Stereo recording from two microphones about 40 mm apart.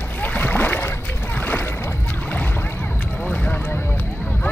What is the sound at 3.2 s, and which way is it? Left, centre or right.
Boat, left.